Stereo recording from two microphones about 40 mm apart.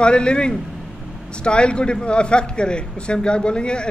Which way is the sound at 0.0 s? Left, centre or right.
Left.